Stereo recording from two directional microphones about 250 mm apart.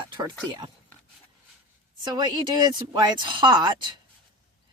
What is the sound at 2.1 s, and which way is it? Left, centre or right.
Speech, centre.